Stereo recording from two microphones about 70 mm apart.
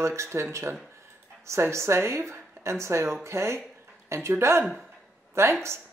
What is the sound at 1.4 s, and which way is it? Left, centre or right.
Speech, right.